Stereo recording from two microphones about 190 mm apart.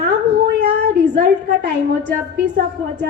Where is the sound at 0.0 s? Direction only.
60° right (ahead or behind).